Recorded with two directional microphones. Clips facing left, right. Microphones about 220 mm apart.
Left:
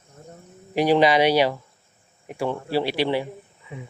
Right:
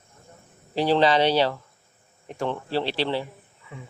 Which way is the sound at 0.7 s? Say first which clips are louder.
Left 2 dB; 15° left (ahead or behind).